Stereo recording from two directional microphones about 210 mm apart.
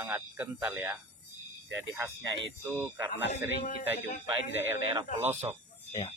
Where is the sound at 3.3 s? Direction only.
35° left (ahead or behind).